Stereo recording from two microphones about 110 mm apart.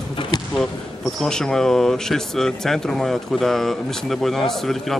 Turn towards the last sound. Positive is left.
turn(degrees=0)  # may be behind; listen again after turning